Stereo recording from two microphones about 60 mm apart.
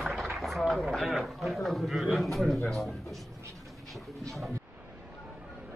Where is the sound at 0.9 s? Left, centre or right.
Centre.